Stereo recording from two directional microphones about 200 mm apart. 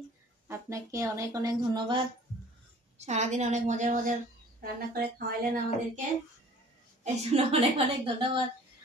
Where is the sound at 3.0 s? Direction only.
35° right (ahead or behind).